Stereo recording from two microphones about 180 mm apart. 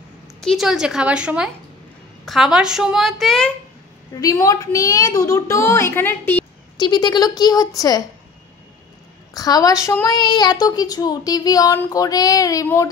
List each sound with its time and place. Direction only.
0.4 s a woman's voice: centre (ahead or behind)
4.2 s a woman's voice: 20° left (ahead or behind)
6.8 s a woman's voice: 25° left (ahead or behind)
9.3 s a woman's voice: 20° left (ahead or behind)